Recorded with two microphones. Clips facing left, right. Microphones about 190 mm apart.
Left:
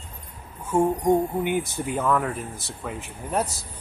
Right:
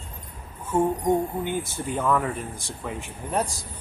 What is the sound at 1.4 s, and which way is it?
Speech, 15° left (ahead or behind).